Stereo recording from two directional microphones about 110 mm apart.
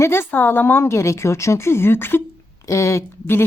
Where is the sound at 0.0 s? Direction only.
20° left (ahead or behind).